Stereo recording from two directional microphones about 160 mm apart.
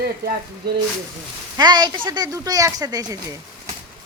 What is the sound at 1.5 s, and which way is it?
Speech, 25° right (ahead or behind).